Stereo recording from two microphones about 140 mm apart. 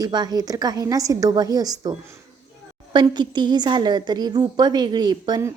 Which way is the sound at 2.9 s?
30° right (ahead or behind).